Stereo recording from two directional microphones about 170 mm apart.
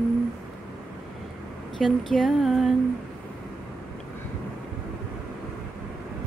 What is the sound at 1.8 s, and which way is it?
Speech, centre (ahead or behind).